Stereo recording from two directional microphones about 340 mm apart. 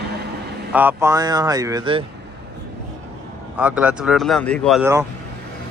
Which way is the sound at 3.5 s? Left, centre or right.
Centre.